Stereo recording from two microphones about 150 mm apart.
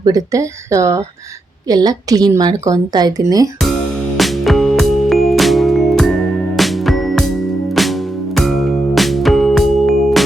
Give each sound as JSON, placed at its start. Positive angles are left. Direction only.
{"t": 0.0, "sound": "a woman's voice", "side_deg": -25}
{"t": 4.2, "sound": "music", "side_deg": 0}
{"t": 8.4, "sound": "music", "side_deg": 0}